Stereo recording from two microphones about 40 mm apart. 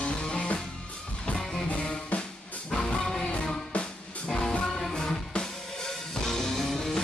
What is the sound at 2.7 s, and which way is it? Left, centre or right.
Music, left.